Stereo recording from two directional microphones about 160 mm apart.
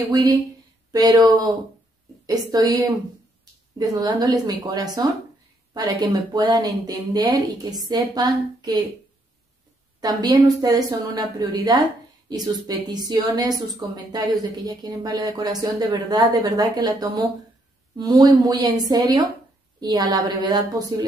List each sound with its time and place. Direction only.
0.1 s a woman's voice: 25° right (ahead or behind)
9.9 s a woman's voice: 25° right (ahead or behind)